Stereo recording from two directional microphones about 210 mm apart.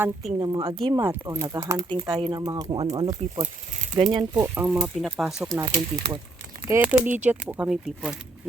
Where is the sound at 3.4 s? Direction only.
35° right (ahead or behind).